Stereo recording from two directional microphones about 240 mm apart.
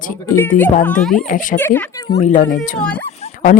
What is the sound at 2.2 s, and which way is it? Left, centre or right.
Speech, left.